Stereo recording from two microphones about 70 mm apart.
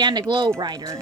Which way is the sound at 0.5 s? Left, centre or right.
Right.